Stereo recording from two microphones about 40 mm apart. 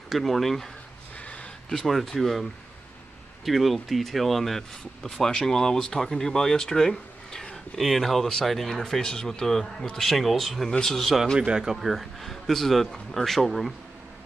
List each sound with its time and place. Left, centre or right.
0.1 s a man's voice: centre
1.2 s a sound: left
1.7 s a man's voice: centre
3.4 s a man's voice: centre
11.3 s speech: right
11.6 s a man's voice: centre